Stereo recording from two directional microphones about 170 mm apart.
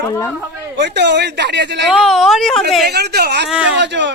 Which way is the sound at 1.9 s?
Centre (ahead or behind).